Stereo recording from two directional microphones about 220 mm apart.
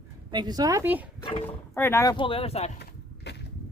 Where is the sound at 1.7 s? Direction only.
10° left (ahead or behind); by 2.7 s 25° left (ahead or behind).